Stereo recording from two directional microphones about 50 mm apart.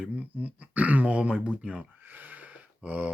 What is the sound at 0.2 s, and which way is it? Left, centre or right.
Speech, right.